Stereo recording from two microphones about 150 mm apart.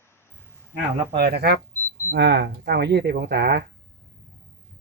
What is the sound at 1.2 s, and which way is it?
Speech, 90° right.